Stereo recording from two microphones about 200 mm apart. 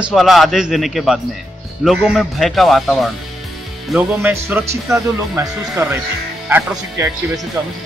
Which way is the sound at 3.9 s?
10° right (ahead or behind).